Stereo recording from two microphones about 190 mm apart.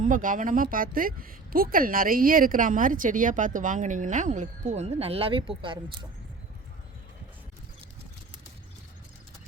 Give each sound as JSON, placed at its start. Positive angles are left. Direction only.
{"t": 0.0, "sound": "speech", "side_deg": -45}